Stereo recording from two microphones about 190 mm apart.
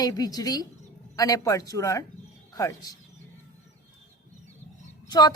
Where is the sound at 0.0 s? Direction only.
20° left (ahead or behind).